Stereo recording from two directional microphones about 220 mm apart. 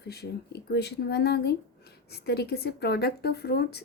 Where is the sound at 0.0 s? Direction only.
45° left (ahead or behind).